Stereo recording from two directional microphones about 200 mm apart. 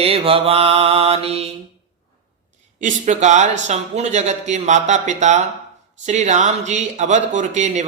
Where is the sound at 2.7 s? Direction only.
40° right (ahead or behind).